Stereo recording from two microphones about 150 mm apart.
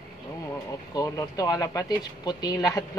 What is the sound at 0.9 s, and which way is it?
Speech, 25° left (ahead or behind).